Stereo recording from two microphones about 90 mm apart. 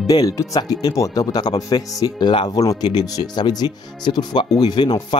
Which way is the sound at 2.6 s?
40° left (ahead or behind).